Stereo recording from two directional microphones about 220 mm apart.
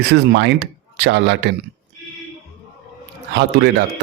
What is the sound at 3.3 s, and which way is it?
Speech, 50° right (ahead or behind).